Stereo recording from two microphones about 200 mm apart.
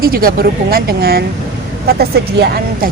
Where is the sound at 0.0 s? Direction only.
50° right (ahead or behind).